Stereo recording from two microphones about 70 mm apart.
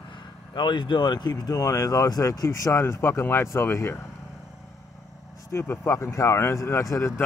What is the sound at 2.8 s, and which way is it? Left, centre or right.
Speech, left.